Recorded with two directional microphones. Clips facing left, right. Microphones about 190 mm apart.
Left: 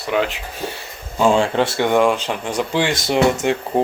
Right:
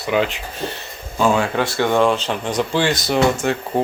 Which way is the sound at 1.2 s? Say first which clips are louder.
Left 2 dB; 25° left (ahead or behind).